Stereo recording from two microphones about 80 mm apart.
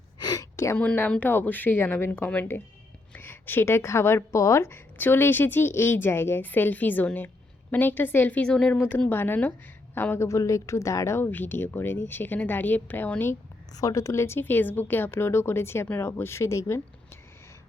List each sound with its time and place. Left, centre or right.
0.2 s gasp: left
0.5 s a sound: left
1.2 s speech: left
9.0 s a woman's voice: left
11.3 s speech: left
13.7 s a woman's voice: left